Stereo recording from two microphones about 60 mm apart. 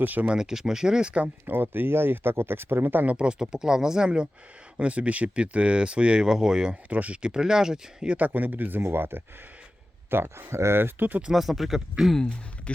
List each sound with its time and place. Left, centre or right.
0.0 s speech: right
0.3 s speech: centre
1.5 s speech: right
3.2 s speech: centre
6.9 s speech: right
8.1 s speech: right
11.3 s speech: centre
12.7 s speech: centre